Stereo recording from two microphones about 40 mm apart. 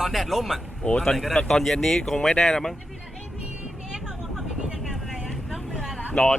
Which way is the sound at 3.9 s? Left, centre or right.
Centre.